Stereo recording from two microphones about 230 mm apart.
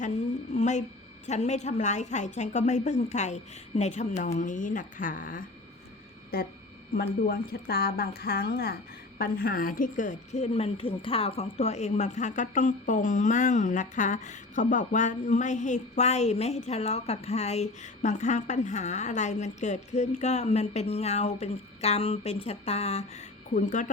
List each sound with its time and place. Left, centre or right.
0.0 s a woman's voice: left